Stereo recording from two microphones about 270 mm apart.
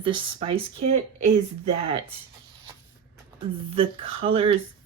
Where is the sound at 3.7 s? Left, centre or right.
Centre.